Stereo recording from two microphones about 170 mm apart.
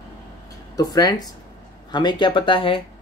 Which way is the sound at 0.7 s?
25° left (ahead or behind).